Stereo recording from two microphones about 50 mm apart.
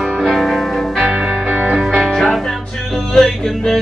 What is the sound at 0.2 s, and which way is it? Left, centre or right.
Music, centre.